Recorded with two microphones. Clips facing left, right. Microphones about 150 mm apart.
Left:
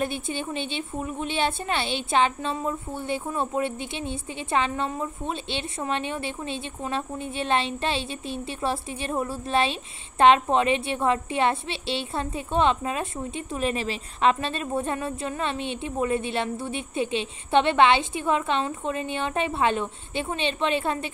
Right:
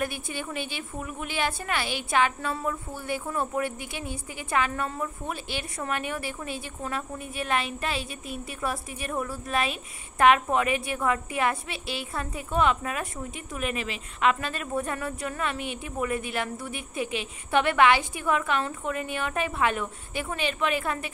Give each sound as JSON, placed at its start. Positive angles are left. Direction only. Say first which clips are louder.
{"t": 0.0, "sound": "a woman's voice", "louder": "left 3 dB", "side_deg": 25}